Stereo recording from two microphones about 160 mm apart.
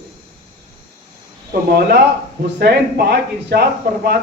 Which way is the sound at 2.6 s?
90° right.